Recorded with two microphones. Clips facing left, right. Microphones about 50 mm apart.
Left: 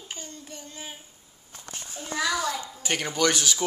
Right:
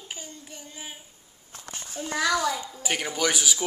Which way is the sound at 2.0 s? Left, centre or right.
Right.